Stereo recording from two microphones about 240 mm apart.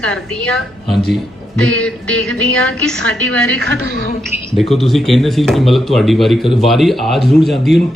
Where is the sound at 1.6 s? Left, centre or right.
Centre.